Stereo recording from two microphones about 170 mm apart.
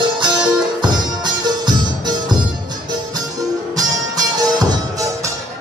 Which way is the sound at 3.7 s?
20° right (ahead or behind).